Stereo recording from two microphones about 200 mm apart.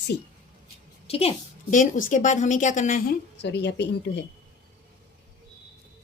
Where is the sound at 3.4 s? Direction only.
60° left (ahead or behind).